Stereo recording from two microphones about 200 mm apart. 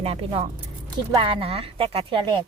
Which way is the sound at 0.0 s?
30° right (ahead or behind).